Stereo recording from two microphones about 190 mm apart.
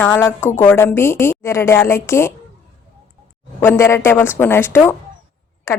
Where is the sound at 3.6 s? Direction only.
15° left (ahead or behind).